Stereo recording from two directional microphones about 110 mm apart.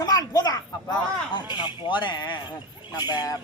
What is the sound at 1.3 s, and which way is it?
A man's voice, 45° left (ahead or behind).